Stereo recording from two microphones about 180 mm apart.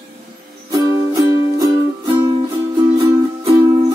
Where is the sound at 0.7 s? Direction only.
20° right (ahead or behind).